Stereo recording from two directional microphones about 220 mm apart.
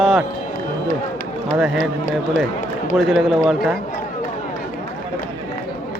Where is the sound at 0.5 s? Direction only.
40° left (ahead or behind).